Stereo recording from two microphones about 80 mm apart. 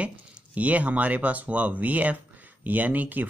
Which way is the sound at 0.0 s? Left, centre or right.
Centre.